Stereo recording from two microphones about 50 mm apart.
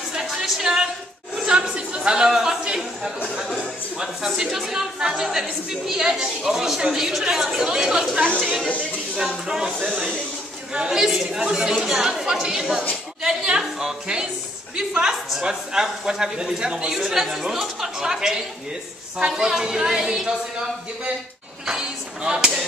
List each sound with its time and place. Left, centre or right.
0.1 s a sound: centre
4.0 s a woman's voice: centre
8.6 s a woman's voice: left
10.7 s a woman's voice: centre